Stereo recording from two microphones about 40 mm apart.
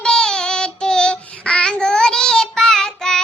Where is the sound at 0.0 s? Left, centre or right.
Centre.